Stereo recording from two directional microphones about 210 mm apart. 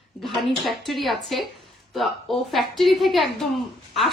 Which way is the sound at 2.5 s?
Centre (ahead or behind).